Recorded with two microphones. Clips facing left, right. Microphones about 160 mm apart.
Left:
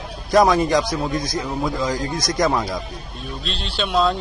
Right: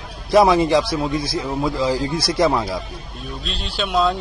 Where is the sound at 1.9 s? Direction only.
30° right (ahead or behind).